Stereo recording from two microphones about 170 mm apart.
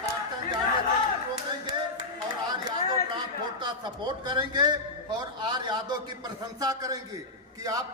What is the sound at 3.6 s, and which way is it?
A man's voice, 25° right (ahead or behind).